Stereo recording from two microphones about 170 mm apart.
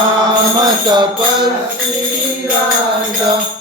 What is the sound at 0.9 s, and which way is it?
Music, 25° right (ahead or behind).